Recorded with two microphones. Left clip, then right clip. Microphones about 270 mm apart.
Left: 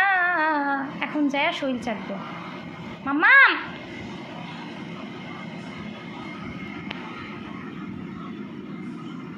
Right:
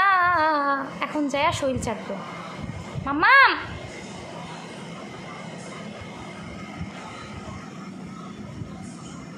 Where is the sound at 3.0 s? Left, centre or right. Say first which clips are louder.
Left 1 dB; centre.